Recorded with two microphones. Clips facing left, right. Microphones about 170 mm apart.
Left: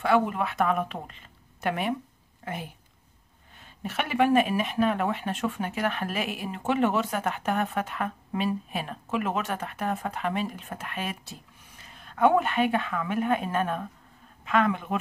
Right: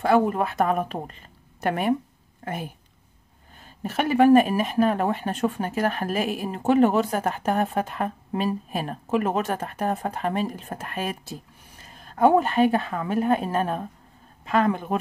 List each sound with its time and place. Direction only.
0.0 s speech: 40° right (ahead or behind)
3.5 s speech: 40° right (ahead or behind)